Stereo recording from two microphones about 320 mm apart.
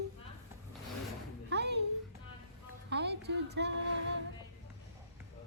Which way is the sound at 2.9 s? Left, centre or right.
Right.